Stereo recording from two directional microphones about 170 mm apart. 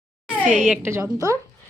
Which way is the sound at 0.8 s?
15° right (ahead or behind).